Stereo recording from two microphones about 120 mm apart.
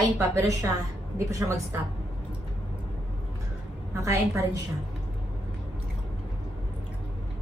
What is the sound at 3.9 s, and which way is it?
Speech, 25° right (ahead or behind).